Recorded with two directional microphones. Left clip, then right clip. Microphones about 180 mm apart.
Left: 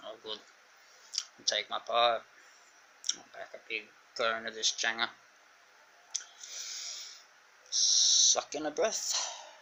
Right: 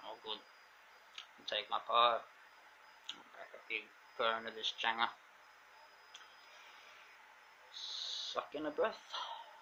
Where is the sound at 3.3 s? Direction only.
15° left (ahead or behind).